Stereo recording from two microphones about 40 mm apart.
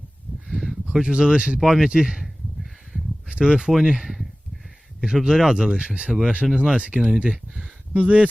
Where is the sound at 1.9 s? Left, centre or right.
Centre.